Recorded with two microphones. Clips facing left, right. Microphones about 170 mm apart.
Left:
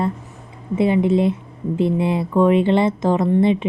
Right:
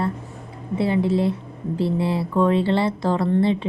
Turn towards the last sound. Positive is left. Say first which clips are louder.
# left 3 dB
turn(degrees=20)  # may be behind; listen again after turning